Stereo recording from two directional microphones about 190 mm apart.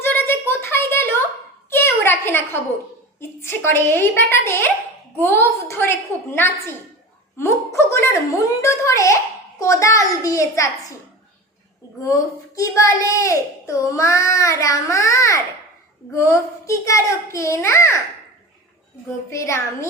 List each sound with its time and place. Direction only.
0.0 s a sound: 10° left (ahead or behind)
3.2 s a child's voice: 10° left (ahead or behind)
7.3 s a child's voice: 15° left (ahead or behind)
12.0 s a child's voice: 15° left (ahead or behind)
19.3 s a child's voice: 15° left (ahead or behind)